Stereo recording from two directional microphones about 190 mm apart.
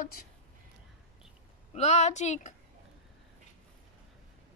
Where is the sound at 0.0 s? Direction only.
50° left (ahead or behind).